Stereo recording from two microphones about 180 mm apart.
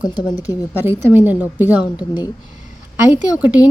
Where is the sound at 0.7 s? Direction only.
10° right (ahead or behind).